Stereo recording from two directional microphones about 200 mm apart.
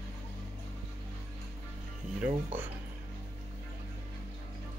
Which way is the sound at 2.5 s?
10° right (ahead or behind).